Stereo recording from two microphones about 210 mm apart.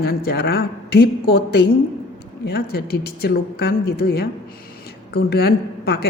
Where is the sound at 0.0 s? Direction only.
45° left (ahead or behind).